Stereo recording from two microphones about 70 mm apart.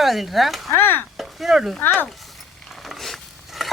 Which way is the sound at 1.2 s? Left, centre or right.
Centre.